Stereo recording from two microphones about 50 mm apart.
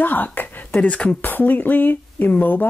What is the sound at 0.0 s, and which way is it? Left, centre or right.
Speech, left.